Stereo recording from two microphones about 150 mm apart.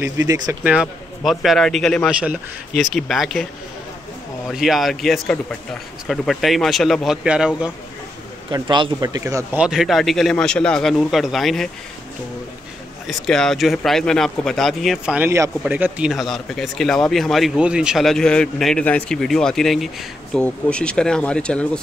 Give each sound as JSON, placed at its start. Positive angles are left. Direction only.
{"t": 0.0, "sound": "speech", "side_deg": -20}
{"t": 0.7, "sound": "speech", "side_deg": -5}
{"t": 4.5, "sound": "speech", "side_deg": 0}
{"t": 8.5, "sound": "speech", "side_deg": -30}
{"t": 9.6, "sound": "speech", "side_deg": -5}
{"t": 13.0, "sound": "speech", "side_deg": 0}
{"t": 15.2, "sound": "speech", "side_deg": -20}